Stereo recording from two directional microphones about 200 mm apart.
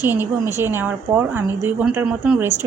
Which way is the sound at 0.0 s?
10° right (ahead or behind).